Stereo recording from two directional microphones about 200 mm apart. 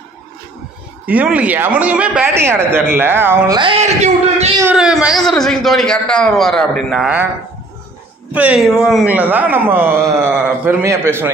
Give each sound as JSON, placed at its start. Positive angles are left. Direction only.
{"t": 1.0, "sound": "a man's voice", "side_deg": -5}
{"t": 3.8, "sound": "a man's voice", "side_deg": -35}
{"t": 4.6, "sound": "a man's voice", "side_deg": -5}
{"t": 8.3, "sound": "a man's voice", "side_deg": -5}